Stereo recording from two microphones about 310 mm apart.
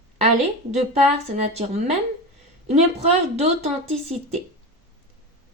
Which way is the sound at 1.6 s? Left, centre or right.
Right.